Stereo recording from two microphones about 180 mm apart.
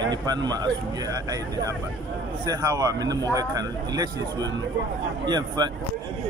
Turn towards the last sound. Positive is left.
turn(degrees=-25)  # may be behind; listen again after turning